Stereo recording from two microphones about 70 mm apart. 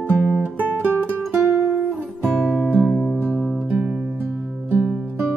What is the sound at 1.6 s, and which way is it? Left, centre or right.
Music, right.